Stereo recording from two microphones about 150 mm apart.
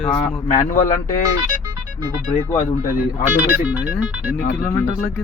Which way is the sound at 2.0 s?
25° right (ahead or behind).